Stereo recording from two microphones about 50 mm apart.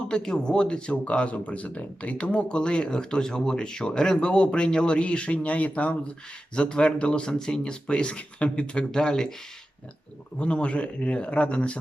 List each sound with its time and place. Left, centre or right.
0.1 s speech: centre
10.3 s speech: left